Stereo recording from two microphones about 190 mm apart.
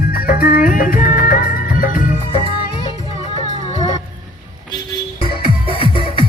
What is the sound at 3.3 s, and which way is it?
Music, 35° left (ahead or behind).